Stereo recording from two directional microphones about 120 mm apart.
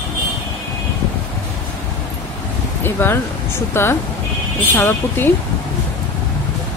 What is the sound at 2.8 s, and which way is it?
Speech, 20° left (ahead or behind).